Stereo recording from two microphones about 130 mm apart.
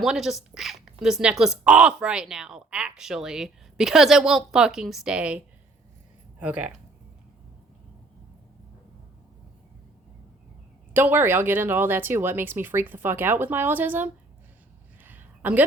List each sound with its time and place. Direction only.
0.0 s speech: 5° right (ahead or behind)
6.4 s speech: 10° right (ahead or behind)
10.9 s speech: 15° right (ahead or behind)
15.0 s a sound: 15° right (ahead or behind)